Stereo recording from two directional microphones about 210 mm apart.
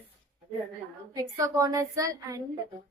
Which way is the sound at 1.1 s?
15° right (ahead or behind).